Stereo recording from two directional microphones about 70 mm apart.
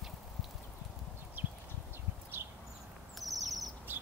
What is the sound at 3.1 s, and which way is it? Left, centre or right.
Owl, centre.